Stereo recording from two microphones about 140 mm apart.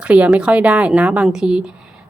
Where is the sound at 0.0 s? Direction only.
10° right (ahead or behind).